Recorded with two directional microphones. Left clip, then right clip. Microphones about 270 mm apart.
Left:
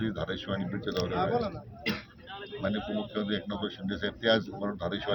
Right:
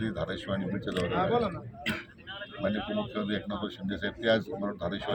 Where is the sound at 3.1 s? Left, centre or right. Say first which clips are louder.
Even; centre.